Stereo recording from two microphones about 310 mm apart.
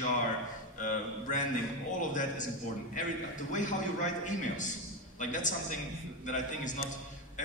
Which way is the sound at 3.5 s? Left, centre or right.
Left.